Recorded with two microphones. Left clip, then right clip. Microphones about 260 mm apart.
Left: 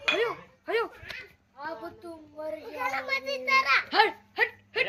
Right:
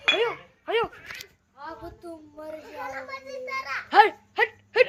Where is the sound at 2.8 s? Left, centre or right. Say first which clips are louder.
Left 8 dB; left.